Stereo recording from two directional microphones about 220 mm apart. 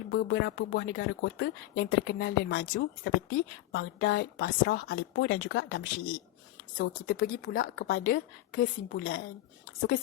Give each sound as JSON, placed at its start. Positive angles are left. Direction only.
{"t": 0.1, "sound": "speech", "side_deg": 55}
{"t": 7.1, "sound": "speech", "side_deg": 40}
{"t": 7.9, "sound": "a woman's voice", "side_deg": 50}